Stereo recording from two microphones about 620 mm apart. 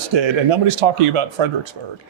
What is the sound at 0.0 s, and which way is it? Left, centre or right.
A man's voice, right.